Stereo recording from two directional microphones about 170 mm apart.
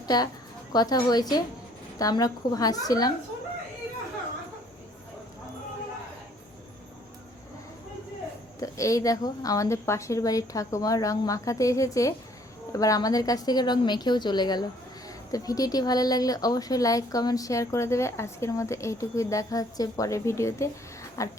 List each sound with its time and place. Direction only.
0.1 s a woman's voice: 25° left (ahead or behind)
8.6 s a woman's voice: 20° left (ahead or behind)